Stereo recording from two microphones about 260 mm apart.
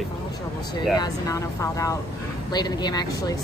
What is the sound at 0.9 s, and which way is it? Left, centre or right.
Speech, centre.